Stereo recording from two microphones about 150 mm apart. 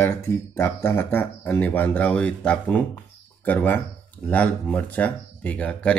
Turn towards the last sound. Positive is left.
turn(degrees=10)  # may be behind; listen again after turning